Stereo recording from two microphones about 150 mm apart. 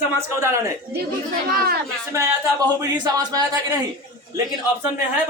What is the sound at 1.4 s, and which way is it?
Speech, 90° right.